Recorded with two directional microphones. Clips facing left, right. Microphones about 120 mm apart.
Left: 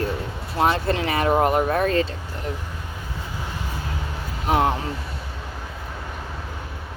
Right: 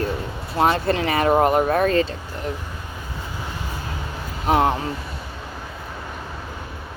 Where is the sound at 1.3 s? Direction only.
30° right (ahead or behind); by 2.0 s 45° right (ahead or behind).